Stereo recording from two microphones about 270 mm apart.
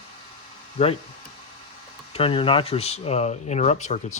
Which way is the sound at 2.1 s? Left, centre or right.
Centre.